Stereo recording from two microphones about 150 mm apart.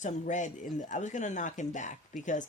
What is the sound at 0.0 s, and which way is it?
Speech, 55° left (ahead or behind).